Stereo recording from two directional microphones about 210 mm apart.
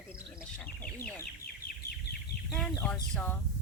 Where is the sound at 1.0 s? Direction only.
45° left (ahead or behind).